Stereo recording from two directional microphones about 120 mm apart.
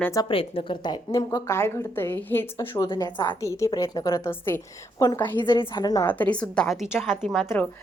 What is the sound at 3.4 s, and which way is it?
Speech, 25° left (ahead or behind).